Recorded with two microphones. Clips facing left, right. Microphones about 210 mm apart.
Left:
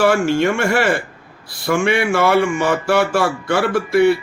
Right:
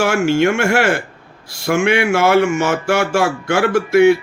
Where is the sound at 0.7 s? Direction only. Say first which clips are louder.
Right 1 dB; 45° right (ahead or behind).